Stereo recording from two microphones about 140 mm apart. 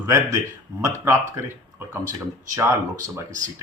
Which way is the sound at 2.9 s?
65° right (ahead or behind).